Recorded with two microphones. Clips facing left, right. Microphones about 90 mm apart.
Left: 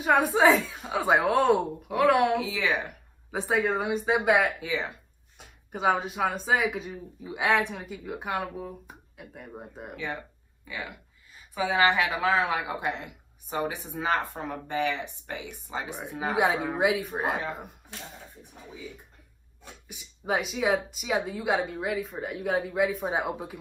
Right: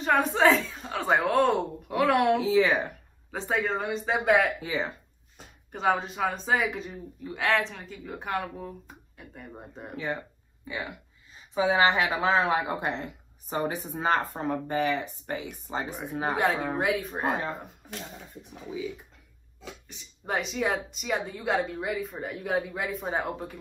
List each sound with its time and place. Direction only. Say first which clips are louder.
0.0 s speech: left 1 dB; 10° left (ahead or behind)
2.4 s speech: right 6 dB; 40° right (ahead or behind)
3.3 s speech: left 2 dB; 10° left (ahead or behind)
4.6 s speech: right 1 dB; 40° right (ahead or behind)
5.7 s speech: left 1 dB; 5° left (ahead or behind)
11.3 s speech: right 2 dB; 25° right (ahead or behind)
12.8 s a woman's voice: even; 40° right (ahead or behind)
15.9 s speech: even; centre (ahead or behind)
17.8 s speech: right 3 dB; 65° right (ahead or behind)
19.9 s speech: left 3 dB; 5° left (ahead or behind)